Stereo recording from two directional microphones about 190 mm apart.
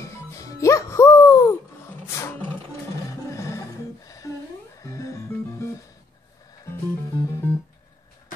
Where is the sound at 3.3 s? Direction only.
15° left (ahead or behind).